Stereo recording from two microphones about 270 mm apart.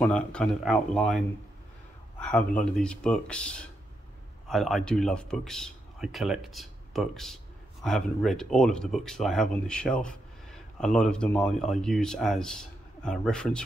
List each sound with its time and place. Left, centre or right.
0.0 s speech: centre